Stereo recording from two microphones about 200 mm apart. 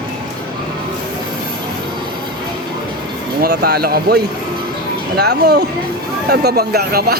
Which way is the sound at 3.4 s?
55° right (ahead or behind).